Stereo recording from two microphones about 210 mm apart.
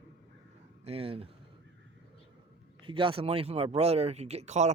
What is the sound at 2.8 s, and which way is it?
Speech, 25° right (ahead or behind).